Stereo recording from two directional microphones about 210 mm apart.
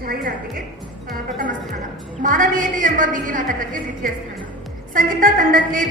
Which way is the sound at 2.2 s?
40° right (ahead or behind).